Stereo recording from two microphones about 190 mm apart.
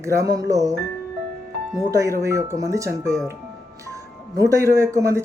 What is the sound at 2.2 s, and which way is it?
Speech, 15° right (ahead or behind).